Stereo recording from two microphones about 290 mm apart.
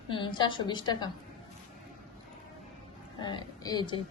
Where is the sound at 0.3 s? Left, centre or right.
Centre.